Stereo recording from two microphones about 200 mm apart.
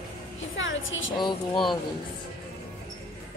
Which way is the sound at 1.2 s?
25° left (ahead or behind).